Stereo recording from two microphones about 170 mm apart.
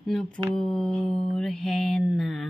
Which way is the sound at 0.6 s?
5° left (ahead or behind).